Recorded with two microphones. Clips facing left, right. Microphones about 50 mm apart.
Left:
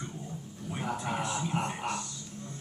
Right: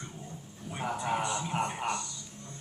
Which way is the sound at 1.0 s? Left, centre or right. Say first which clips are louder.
Right 4 dB; centre.